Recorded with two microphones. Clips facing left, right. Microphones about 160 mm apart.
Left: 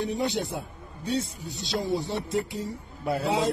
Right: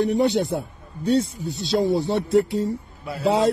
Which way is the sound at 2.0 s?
75° right (ahead or behind).